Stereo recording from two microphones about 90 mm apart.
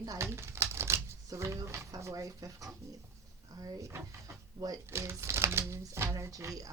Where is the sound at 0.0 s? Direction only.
40° right (ahead or behind).